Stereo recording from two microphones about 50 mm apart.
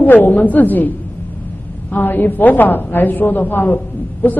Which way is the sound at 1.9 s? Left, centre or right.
Left.